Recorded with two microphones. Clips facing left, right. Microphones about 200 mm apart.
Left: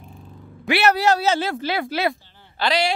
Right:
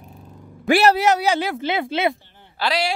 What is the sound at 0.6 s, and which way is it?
Speech, 45° right (ahead or behind).